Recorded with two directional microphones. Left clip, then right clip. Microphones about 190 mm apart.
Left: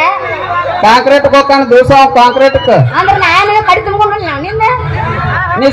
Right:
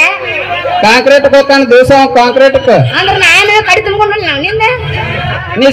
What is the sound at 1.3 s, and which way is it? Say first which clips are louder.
A man's voice: right 1 dB; 40° right (ahead or behind).